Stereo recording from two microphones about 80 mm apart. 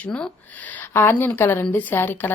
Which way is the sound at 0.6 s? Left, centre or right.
Centre.